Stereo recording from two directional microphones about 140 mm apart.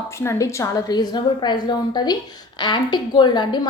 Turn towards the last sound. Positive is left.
turn(degrees=30)  # may be behind; listen again after turning